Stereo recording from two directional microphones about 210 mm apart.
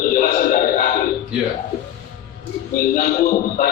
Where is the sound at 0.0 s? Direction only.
40° left (ahead or behind).